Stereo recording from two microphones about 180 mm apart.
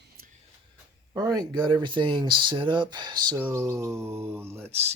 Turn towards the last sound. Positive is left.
turn(degrees=-15)  # may be behind; listen again after turning